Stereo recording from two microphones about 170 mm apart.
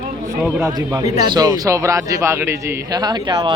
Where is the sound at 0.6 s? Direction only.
20° right (ahead or behind).